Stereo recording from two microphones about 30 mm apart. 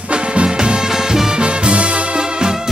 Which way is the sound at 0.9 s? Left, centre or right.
Centre.